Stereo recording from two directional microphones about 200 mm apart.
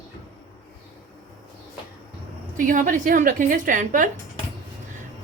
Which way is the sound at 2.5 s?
40° right (ahead or behind).